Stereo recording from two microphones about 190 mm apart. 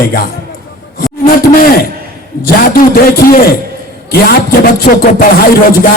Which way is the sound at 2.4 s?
50° left (ahead or behind).